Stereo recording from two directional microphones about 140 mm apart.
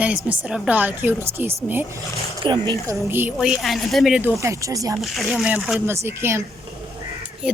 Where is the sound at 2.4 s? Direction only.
30° right (ahead or behind).